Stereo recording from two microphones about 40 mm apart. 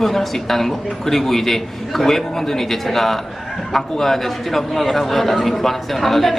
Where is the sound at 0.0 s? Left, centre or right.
Centre.